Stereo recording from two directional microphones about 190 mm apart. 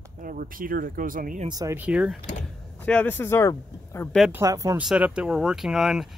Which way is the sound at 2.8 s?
10° left (ahead or behind).